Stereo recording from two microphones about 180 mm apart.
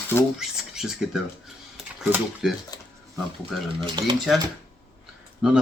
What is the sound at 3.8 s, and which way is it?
Speech, 25° right (ahead or behind).